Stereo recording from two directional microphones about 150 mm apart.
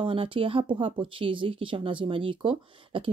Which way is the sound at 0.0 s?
35° right (ahead or behind).